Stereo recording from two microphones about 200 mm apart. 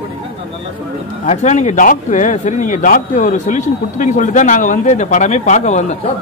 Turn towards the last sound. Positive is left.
turn(degrees=35)  # may be behind; listen again after turning